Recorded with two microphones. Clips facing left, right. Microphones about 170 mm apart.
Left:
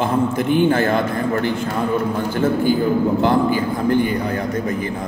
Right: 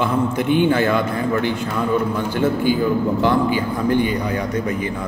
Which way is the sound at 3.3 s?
45° left (ahead or behind).